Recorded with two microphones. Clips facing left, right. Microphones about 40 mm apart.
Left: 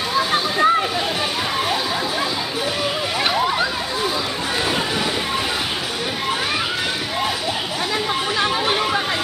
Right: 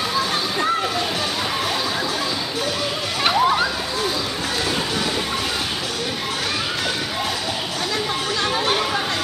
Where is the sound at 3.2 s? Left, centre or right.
Centre.